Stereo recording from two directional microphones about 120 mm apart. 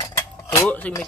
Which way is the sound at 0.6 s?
10° left (ahead or behind).